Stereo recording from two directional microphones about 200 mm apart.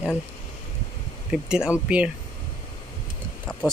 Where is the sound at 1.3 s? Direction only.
5° right (ahead or behind).